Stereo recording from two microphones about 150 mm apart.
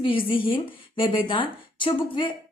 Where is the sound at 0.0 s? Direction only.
35° left (ahead or behind).